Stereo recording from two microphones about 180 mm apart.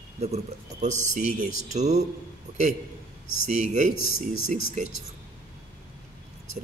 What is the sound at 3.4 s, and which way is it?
Speech, 40° right (ahead or behind).